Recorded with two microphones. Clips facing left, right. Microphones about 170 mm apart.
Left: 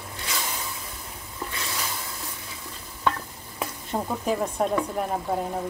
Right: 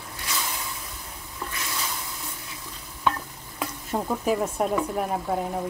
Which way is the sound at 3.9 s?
Centre (ahead or behind).